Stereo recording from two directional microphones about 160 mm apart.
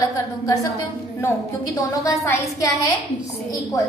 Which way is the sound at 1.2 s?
20° left (ahead or behind).